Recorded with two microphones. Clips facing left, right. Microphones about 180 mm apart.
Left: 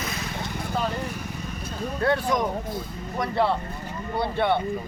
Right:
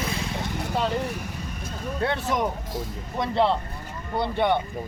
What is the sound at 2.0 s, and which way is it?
Speech, 25° right (ahead or behind).